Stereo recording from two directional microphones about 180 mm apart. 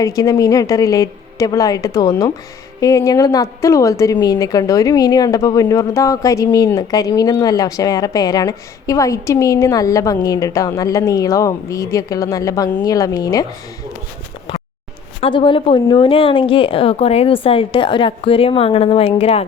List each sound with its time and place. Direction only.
0.0 s a woman's voice: 20° left (ahead or behind)
14.5 s a sound: 25° left (ahead or behind)
15.2 s speech: 30° left (ahead or behind)